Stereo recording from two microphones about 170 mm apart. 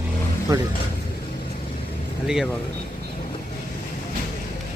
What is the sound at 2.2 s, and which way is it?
Speech, 5° right (ahead or behind).